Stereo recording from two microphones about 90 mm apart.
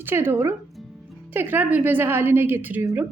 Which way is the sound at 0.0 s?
25° right (ahead or behind).